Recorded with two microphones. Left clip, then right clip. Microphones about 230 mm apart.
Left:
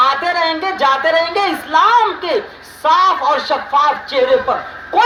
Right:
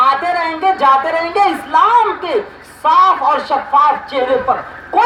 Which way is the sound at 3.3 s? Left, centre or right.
Left.